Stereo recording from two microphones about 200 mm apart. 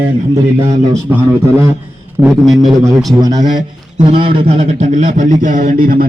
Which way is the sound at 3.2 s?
20° right (ahead or behind).